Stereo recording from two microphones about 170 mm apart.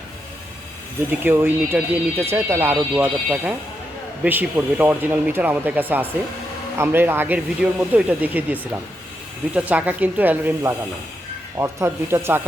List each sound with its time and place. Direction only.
1.2 s speech: 10° right (ahead or behind)
9.6 s speech: 10° right (ahead or behind)